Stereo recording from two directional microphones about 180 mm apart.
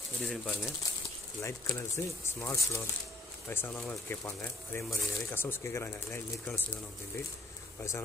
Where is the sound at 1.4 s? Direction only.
15° left (ahead or behind).